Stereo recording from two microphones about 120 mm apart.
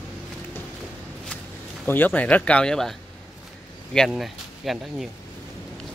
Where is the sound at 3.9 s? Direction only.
Centre (ahead or behind).